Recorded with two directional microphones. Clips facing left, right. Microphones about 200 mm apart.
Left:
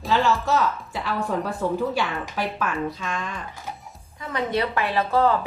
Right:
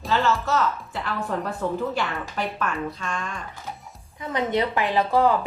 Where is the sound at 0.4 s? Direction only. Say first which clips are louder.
Left 1 dB; 15° left (ahead or behind).